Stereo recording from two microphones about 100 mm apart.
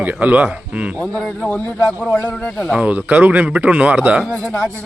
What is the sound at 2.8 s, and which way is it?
A man's voice, 15° right (ahead or behind).